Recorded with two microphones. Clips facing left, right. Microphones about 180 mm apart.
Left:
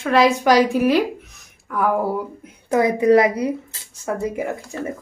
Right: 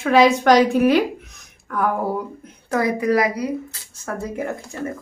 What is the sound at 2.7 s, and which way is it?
Speech, 20° left (ahead or behind).